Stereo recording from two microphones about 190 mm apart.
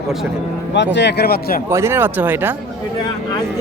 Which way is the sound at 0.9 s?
60° left (ahead or behind).